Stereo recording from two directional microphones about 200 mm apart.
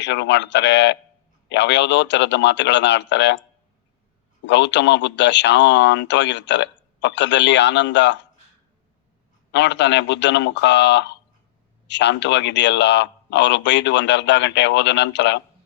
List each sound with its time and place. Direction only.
0.0 s a man's voice: 60° left (ahead or behind)
4.4 s a man's voice: 65° left (ahead or behind)
9.5 s a man's voice: 60° left (ahead or behind)